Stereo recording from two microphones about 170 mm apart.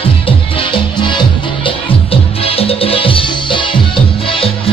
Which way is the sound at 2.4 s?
35° left (ahead or behind).